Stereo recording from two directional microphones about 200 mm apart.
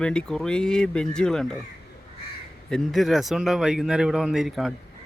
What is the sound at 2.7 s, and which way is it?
Speech, centre (ahead or behind).